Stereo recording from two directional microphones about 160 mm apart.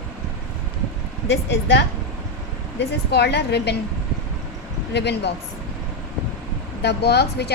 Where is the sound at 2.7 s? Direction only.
90° left.